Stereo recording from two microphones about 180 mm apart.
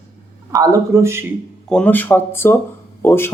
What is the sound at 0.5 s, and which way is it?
Speech, 20° right (ahead or behind).